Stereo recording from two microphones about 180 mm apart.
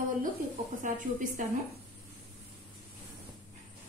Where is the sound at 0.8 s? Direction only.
45° right (ahead or behind).